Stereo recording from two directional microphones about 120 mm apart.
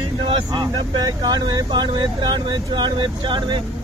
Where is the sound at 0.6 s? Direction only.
35° right (ahead or behind).